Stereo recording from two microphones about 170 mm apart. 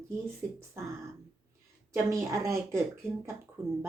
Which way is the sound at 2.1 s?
20° right (ahead or behind).